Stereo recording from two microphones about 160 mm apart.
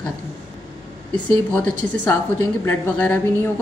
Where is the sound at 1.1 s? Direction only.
10° left (ahead or behind).